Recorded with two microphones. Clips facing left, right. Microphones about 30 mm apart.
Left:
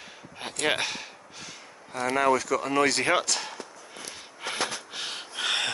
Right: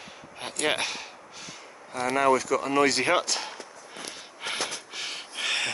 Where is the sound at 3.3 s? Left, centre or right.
Centre.